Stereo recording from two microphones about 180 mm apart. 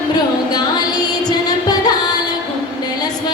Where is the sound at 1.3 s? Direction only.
20° left (ahead or behind).